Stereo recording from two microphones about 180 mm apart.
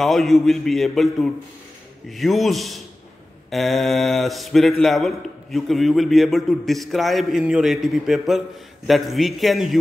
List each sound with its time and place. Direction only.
0.0 s speech: centre (ahead or behind)